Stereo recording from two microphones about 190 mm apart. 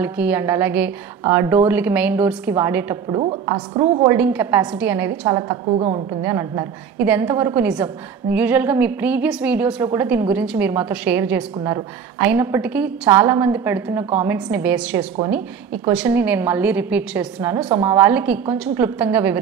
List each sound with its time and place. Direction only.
0.0 s a woman's voice: 10° right (ahead or behind)
3.1 s a woman's voice: 30° right (ahead or behind)
4.0 s a woman's voice: 10° right (ahead or behind)
5.8 s a woman's voice: 35° right (ahead or behind)
6.2 s a woman's voice: 15° right (ahead or behind)